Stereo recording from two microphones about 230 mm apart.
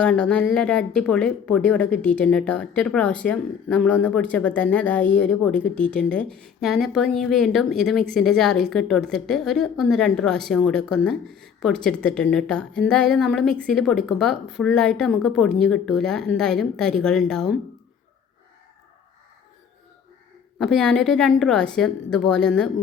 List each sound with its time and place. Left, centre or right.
0.0 s a woman's voice: centre
20.6 s a woman's voice: centre